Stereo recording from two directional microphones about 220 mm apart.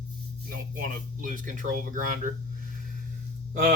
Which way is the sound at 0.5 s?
40° right (ahead or behind).